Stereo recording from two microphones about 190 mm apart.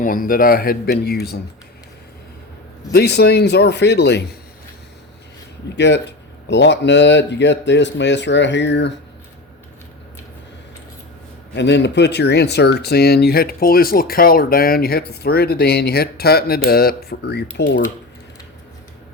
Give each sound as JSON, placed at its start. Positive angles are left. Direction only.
{"t": 0.0, "sound": "speech", "side_deg": 45}
{"t": 2.9, "sound": "speech", "side_deg": 60}
{"t": 5.6, "sound": "speech", "side_deg": 65}
{"t": 11.5, "sound": "speech", "side_deg": 65}